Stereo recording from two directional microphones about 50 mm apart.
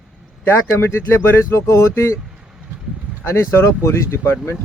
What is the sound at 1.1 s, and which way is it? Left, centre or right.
Speech, left.